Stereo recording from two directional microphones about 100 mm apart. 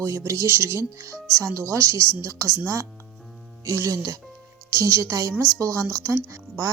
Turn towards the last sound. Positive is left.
turn(degrees=-30)  # may be behind; listen again after turning